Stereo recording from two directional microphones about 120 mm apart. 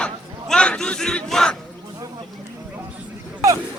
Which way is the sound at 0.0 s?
10° left (ahead or behind).